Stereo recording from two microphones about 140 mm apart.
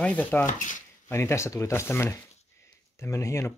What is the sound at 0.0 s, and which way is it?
Speech, 10° left (ahead or behind).